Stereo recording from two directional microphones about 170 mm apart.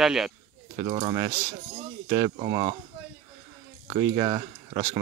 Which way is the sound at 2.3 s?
35° right (ahead or behind).